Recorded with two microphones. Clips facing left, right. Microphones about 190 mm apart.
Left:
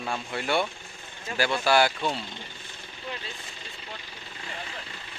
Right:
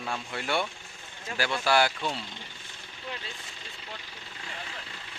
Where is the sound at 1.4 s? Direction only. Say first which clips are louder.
Left 3 dB; 35° left (ahead or behind).